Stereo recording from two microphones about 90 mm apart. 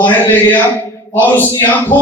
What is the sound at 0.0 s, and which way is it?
A man's voice, 25° left (ahead or behind).